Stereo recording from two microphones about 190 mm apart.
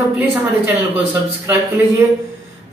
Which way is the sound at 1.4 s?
15° right (ahead or behind).